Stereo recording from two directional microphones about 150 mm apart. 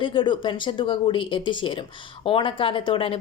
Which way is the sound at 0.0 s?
35° left (ahead or behind).